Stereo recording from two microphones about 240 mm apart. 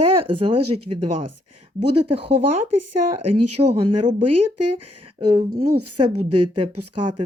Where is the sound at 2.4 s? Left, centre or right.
Right.